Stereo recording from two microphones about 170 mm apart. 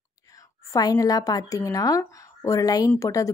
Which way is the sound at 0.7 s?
20° left (ahead or behind).